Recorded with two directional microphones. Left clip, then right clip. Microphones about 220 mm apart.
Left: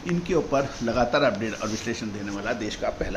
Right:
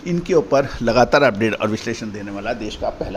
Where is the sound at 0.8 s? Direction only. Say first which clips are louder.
Right 8 dB; 50° right (ahead or behind).